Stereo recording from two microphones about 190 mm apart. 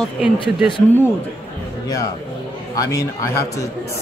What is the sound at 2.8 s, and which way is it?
Speech, 15° left (ahead or behind).